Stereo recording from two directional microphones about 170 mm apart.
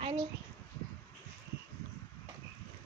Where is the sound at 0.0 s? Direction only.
25° right (ahead or behind).